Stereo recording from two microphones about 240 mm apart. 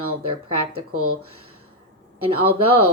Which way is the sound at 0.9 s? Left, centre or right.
Right.